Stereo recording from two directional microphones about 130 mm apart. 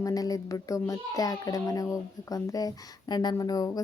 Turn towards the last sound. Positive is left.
turn(degrees=30)  # may be behind; listen again after turning